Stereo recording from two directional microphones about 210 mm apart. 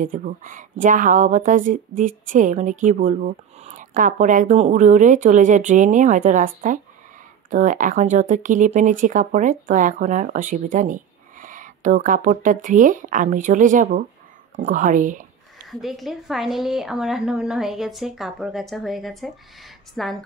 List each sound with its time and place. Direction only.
0.0 s speech: 40° right (ahead or behind)
15.7 s a woman's voice: centre (ahead or behind)